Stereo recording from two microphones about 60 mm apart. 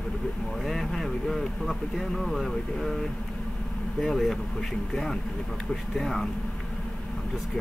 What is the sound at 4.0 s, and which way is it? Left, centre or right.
Speech, centre.